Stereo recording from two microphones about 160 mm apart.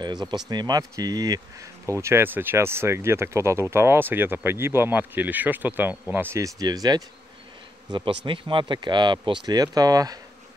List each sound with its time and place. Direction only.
0.0 s speech: 25° right (ahead or behind)
8.3 s speech: 30° right (ahead or behind)